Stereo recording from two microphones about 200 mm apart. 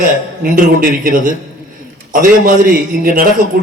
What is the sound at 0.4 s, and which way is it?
A man's voice, 45° right (ahead or behind).